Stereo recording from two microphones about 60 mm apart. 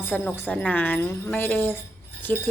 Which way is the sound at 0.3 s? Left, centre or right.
Left.